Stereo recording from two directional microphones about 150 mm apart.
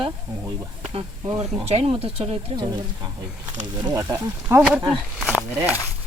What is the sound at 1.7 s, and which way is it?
Speech, 40° right (ahead or behind).